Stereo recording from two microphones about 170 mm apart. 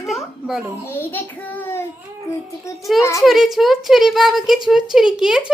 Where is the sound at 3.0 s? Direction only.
15° left (ahead or behind).